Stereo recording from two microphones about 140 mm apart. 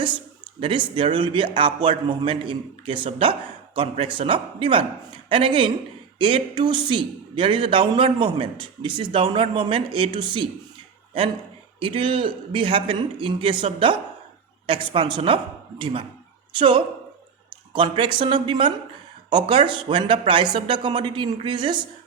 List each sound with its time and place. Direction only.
0.6 s speech: 35° right (ahead or behind)
11.8 s speech: 40° right (ahead or behind)